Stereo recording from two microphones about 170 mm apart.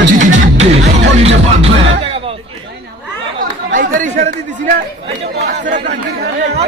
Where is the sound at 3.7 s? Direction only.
50° right (ahead or behind).